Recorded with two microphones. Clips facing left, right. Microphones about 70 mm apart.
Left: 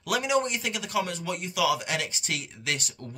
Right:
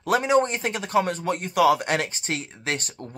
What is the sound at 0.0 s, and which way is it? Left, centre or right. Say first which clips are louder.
Speech: right 6 dB; right.